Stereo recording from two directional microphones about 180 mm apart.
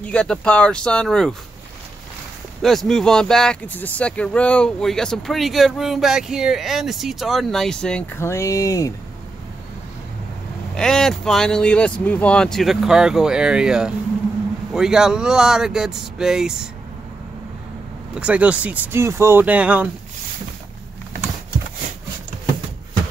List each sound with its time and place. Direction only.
0.0 s speech: 5° left (ahead or behind)
2.6 s speech: centre (ahead or behind)
8.2 s speech: 15° left (ahead or behind)
10.8 s speech: 5° left (ahead or behind)
18.1 s speech: 5° right (ahead or behind)